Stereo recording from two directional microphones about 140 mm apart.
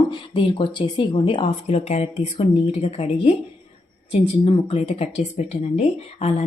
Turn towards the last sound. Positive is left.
turn(degrees=45)  # may be behind; listen again after turning